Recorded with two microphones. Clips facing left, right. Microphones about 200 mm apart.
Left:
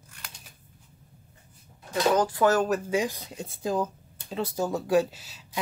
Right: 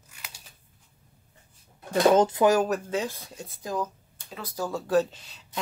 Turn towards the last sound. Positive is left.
turn(degrees=5)  # may be behind; listen again after turning